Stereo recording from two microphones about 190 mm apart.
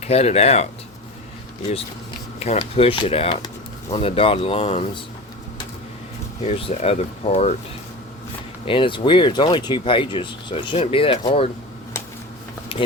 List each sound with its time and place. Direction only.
0.0 s speech: 35° left (ahead or behind)
2.4 s speech: 35° left (ahead or behind)
6.4 s speech: 30° left (ahead or behind)
8.6 s speech: 25° left (ahead or behind)